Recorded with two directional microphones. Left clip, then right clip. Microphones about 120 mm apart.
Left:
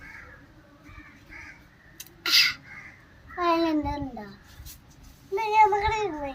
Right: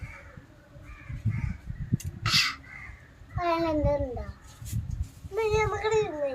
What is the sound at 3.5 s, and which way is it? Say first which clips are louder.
Speech: left 3 dB; 30° right (ahead or behind).